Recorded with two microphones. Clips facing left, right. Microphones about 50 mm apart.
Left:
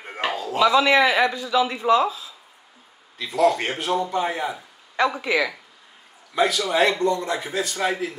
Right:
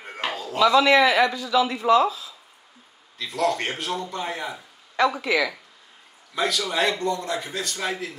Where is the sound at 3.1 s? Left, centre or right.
Centre.